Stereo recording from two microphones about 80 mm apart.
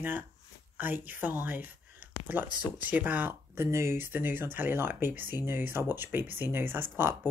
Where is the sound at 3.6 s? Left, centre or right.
Right.